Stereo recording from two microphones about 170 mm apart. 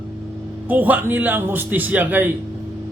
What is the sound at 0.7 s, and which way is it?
A man's voice, 10° right (ahead or behind).